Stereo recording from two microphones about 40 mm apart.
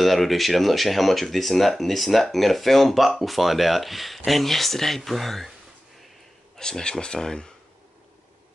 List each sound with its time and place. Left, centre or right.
0.0 s speech: centre
6.6 s speech: centre